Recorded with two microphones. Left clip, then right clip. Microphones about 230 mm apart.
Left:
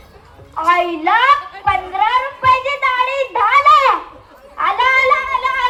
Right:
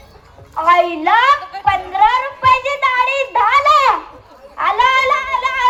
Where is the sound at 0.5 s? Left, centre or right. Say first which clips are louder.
Right 2 dB; right.